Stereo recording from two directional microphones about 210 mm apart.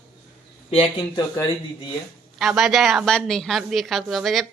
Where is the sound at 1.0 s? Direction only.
20° left (ahead or behind).